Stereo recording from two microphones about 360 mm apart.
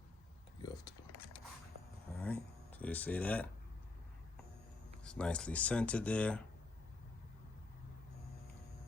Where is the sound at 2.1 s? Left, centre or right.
Centre.